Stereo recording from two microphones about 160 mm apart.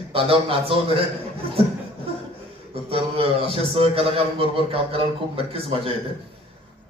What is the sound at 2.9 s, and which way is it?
A man's voice, 35° right (ahead or behind).